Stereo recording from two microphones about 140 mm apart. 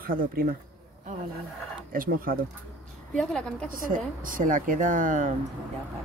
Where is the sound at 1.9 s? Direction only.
90° right.